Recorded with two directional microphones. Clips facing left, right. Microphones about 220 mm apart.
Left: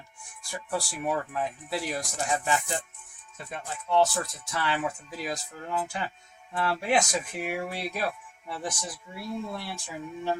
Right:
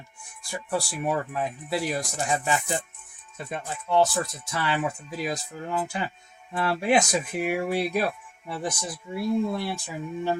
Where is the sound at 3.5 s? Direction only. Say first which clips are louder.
Right 2 dB; 10° right (ahead or behind).